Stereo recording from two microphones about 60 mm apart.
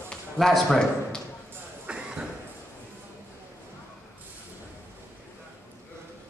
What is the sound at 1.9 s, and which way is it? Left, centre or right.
Cough, centre.